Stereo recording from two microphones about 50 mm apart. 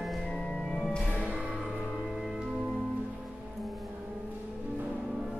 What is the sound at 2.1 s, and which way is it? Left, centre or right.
Music, centre.